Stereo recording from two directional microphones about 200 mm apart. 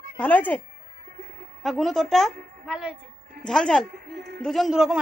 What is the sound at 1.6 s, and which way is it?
A woman's voice, centre (ahead or behind).